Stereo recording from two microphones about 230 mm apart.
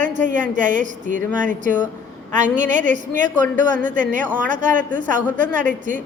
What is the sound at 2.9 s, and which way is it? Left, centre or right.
A man's voice, right.